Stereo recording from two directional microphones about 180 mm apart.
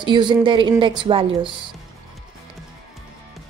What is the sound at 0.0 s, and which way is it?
A woman's voice, 25° right (ahead or behind).